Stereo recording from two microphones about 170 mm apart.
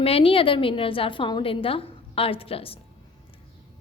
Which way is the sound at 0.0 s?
35° left (ahead or behind).